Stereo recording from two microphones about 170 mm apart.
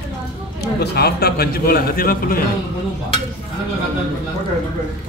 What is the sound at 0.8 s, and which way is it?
A man's voice, 70° left (ahead or behind).